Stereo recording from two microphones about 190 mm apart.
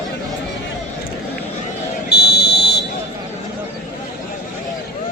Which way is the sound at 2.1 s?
55° left (ahead or behind).